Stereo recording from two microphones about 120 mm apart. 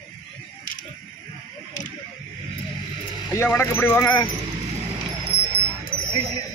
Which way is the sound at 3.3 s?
20° left (ahead or behind).